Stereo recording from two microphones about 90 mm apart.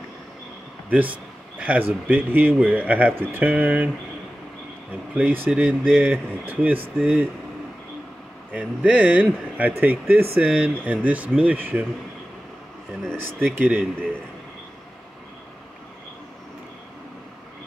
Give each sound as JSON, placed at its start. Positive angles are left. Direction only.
{"t": 0.8, "sound": "speech", "side_deg": -15}
{"t": 5.1, "sound": "speech", "side_deg": -20}
{"t": 8.5, "sound": "speech", "side_deg": -15}
{"t": 13.1, "sound": "speech", "side_deg": 5}
{"t": 13.6, "sound": "speech", "side_deg": -15}